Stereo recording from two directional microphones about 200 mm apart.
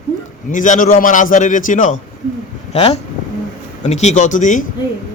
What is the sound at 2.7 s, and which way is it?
A man's voice, 30° left (ahead or behind).